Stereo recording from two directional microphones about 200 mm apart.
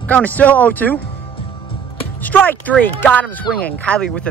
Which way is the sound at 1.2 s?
25° left (ahead or behind).